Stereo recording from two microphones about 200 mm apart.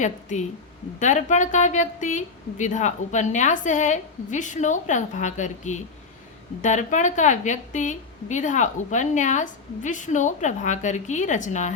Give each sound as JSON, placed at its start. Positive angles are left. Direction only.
{"t": 0.0, "sound": "a woman's voice", "side_deg": 35}